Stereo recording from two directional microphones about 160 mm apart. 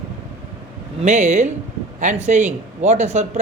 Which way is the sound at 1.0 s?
45° right (ahead or behind).